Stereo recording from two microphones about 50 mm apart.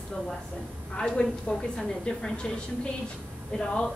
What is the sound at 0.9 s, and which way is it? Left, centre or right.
A woman's voice, centre.